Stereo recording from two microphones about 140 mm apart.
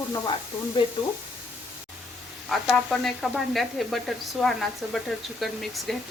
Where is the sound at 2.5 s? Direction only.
Centre (ahead or behind).